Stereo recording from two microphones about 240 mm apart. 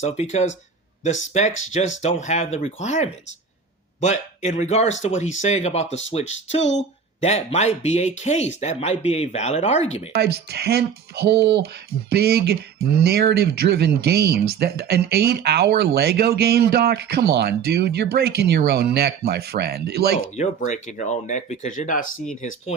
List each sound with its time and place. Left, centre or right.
0.0 s speech: left
10.1 s speech: right
20.3 s speech: left